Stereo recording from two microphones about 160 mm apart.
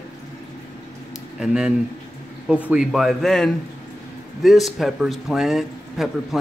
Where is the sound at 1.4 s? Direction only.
5° right (ahead or behind).